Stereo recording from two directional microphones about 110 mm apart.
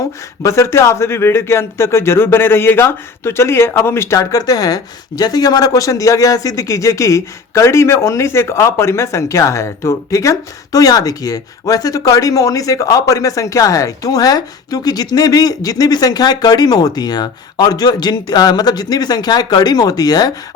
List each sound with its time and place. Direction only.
0.4 s speech: 25° left (ahead or behind)